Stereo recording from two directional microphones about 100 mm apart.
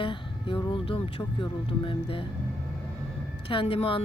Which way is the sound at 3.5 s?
65° left (ahead or behind).